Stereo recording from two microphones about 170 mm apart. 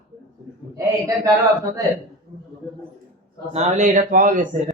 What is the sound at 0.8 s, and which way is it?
Speech, 20° right (ahead or behind).